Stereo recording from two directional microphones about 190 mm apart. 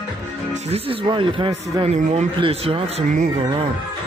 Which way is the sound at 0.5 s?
35° right (ahead or behind).